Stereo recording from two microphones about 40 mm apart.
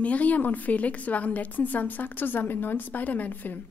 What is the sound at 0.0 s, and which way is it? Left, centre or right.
A woman's voice, left.